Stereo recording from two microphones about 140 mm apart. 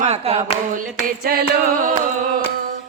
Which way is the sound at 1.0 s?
90° right.